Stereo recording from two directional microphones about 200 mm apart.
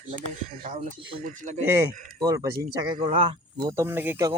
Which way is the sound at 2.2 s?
20° right (ahead or behind).